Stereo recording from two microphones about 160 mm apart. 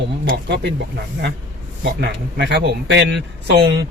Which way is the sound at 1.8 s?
90° right.